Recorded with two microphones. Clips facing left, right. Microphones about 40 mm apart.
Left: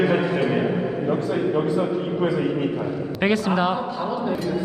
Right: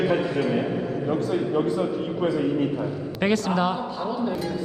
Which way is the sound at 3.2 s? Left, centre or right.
Centre.